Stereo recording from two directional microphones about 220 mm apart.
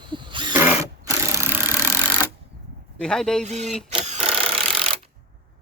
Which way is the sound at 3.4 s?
30° right (ahead or behind).